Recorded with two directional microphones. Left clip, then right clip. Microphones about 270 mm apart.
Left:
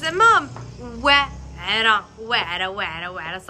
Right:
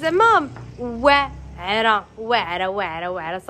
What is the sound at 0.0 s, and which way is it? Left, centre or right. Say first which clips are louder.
Speech: even; centre.